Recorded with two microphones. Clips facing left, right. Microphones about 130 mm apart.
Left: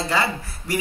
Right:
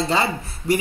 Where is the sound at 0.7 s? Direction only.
25° right (ahead or behind).